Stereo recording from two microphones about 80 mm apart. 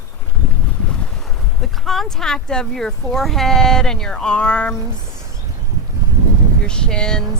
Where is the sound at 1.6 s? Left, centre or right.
Centre.